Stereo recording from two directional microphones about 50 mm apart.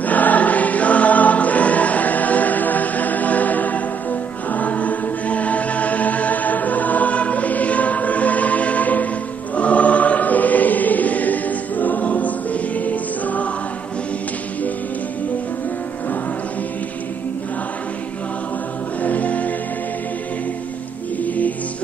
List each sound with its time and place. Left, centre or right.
0.0 s choir: left
12.8 s music: left
19.0 s music: left
21.2 s music: left